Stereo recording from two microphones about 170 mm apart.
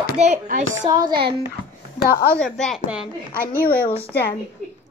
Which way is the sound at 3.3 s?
55° left (ahead or behind).